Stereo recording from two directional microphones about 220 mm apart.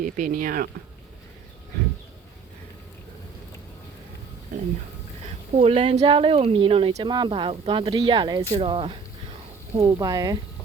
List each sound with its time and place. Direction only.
0.0 s speech: 35° right (ahead or behind)
5.5 s speech: 25° right (ahead or behind)